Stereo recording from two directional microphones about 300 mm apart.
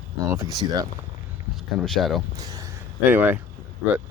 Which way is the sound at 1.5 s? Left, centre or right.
Centre.